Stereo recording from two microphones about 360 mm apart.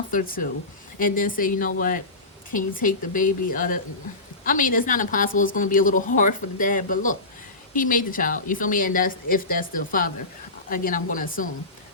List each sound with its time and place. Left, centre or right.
0.1 s a woman's voice: left